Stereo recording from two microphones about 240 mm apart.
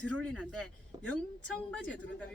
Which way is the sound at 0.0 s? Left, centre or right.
Centre.